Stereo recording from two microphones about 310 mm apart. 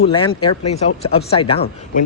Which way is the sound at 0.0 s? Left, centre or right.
Centre.